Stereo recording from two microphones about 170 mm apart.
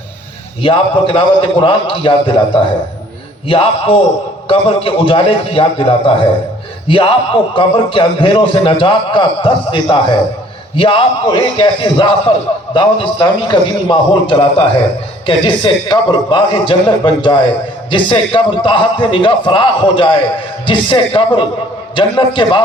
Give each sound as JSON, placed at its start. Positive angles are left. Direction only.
{"t": 0.6, "sound": "a man's voice", "side_deg": 30}